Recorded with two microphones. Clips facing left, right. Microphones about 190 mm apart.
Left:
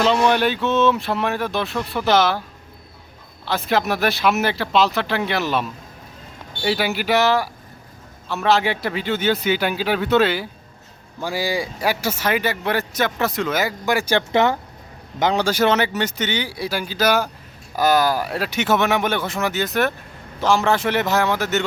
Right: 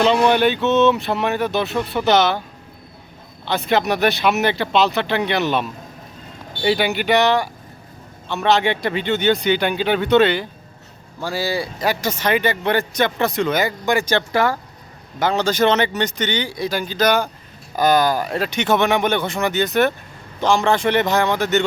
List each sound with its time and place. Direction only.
0.0 s speech: centre (ahead or behind)
3.4 s speech: centre (ahead or behind)
11.2 s speech: 15° left (ahead or behind)
14.3 s speech: 20° left (ahead or behind); by 21.6 s 5° left (ahead or behind)